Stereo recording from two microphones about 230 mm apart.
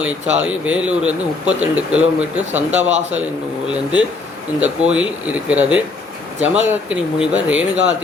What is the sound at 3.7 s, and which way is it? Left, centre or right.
Speech, centre.